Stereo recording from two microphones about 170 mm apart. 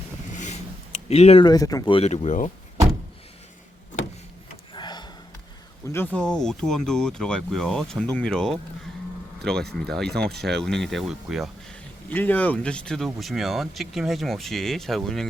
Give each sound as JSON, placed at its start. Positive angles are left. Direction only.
{"t": 0.3, "sound": "a sound", "side_deg": 45}
{"t": 1.5, "sound": "speech", "side_deg": 20}
{"t": 2.0, "sound": "speech", "side_deg": 40}
{"t": 4.7, "sound": "gasp", "side_deg": 25}
{"t": 5.9, "sound": "speech", "side_deg": 10}
{"t": 12.0, "sound": "speech", "side_deg": 10}